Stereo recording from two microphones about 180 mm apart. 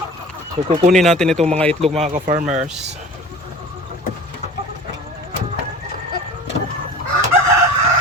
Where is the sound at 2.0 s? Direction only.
45° right (ahead or behind).